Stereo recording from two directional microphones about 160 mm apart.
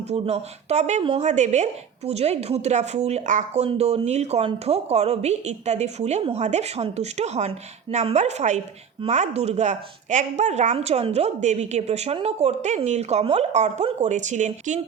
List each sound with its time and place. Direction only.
0.1 s speech: 40° right (ahead or behind)